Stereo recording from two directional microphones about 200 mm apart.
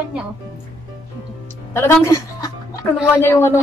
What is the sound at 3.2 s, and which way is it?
Speech, 10° left (ahead or behind).